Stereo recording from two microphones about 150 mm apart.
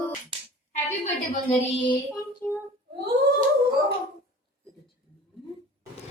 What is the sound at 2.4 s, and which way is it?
Child singing, 15° left (ahead or behind).